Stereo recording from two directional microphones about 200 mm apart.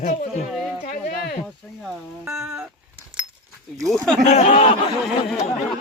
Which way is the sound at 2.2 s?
5° right (ahead or behind).